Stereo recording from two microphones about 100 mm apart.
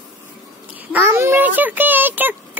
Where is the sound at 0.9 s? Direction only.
25° right (ahead or behind).